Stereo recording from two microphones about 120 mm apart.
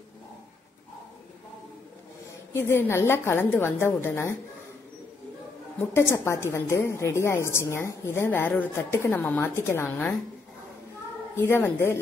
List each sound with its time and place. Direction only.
2.5 s a woman's voice: 20° left (ahead or behind)
5.9 s a woman's voice: 20° left (ahead or behind)
11.3 s a woman's voice: 20° left (ahead or behind)